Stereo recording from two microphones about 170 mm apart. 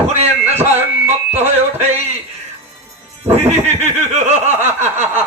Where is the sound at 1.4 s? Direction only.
40° right (ahead or behind).